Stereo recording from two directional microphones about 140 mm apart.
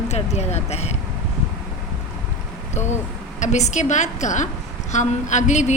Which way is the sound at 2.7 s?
55° left (ahead or behind).